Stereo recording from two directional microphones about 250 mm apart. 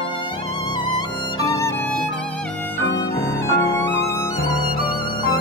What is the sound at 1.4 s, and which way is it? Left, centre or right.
Music, centre.